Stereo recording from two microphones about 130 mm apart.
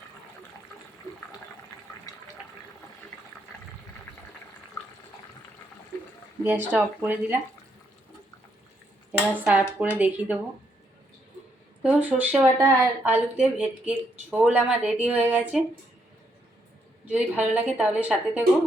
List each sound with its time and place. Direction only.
6.4 s speech: 15° right (ahead or behind)
9.1 s speech: 10° right (ahead or behind)
11.8 s speech: 10° right (ahead or behind)
17.1 s speech: 10° right (ahead or behind)